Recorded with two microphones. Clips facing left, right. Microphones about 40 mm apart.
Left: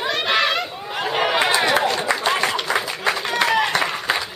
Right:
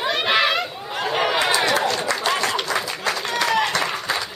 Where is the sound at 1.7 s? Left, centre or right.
Centre.